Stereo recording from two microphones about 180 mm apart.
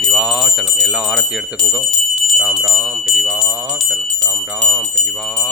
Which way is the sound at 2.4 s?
20° right (ahead or behind).